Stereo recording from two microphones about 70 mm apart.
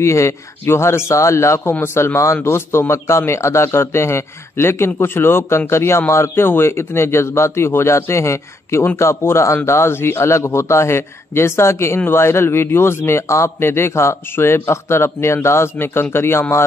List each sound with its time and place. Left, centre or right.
0.0 s a man's voice: left
1.6 s a man's voice: left